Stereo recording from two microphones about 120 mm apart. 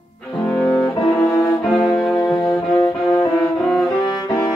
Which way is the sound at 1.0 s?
40° left (ahead or behind).